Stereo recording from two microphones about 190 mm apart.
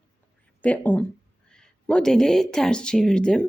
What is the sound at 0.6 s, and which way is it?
A woman's voice, 10° left (ahead or behind).